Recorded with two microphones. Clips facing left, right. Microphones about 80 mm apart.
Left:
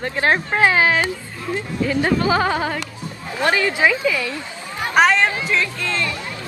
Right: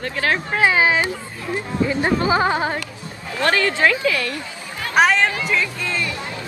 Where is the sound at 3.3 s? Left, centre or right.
Centre.